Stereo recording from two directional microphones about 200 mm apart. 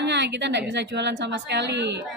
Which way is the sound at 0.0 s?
60° right (ahead or behind).